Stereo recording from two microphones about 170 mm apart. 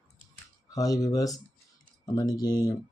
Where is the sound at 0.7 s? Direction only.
20° left (ahead or behind).